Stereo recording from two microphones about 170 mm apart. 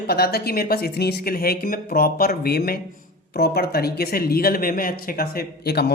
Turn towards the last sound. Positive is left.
turn(degrees=70)  # may be behind; listen again after turning